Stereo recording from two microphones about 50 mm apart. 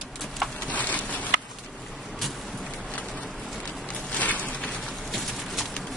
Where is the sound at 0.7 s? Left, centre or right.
Left.